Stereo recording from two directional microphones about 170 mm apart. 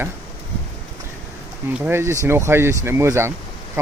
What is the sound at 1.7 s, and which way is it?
Speech, 15° right (ahead or behind).